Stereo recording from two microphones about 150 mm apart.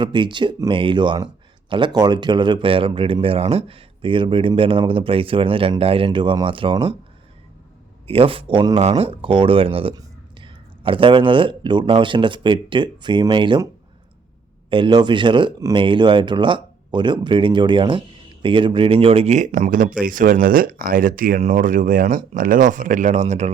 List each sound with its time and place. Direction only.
0.0 s speech: 30° right (ahead or behind)
8.0 s speech: 40° right (ahead or behind)
14.7 s speech: 30° right (ahead or behind); by 21.4 s 70° right (ahead or behind)
21.4 s speech: 60° right (ahead or behind)